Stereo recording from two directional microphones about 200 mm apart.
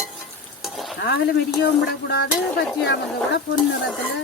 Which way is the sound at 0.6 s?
Centre (ahead or behind).